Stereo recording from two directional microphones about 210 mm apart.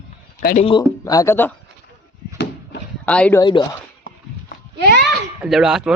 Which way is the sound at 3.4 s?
20° left (ahead or behind).